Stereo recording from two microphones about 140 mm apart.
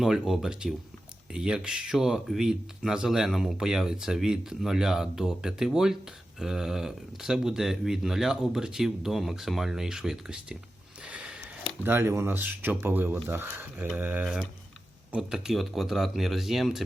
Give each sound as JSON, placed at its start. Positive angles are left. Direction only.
{"t": 0.0, "sound": "speech", "side_deg": -5}
{"t": 11.0, "sound": "a sound", "side_deg": -5}
{"t": 11.8, "sound": "speech", "side_deg": -15}